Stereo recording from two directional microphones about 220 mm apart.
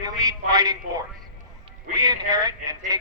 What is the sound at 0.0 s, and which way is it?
Speech, 15° right (ahead or behind).